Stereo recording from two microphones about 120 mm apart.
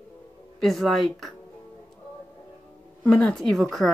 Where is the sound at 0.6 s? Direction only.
Centre (ahead or behind).